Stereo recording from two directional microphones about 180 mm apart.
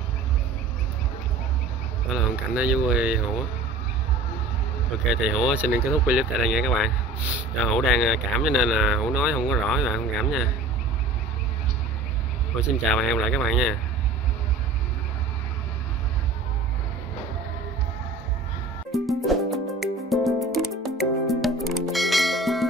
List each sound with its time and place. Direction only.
2.1 s speech: 5° right (ahead or behind)
5.1 s speech: 5° right (ahead or behind)
12.5 s speech: centre (ahead or behind)
18.9 s music: centre (ahead or behind)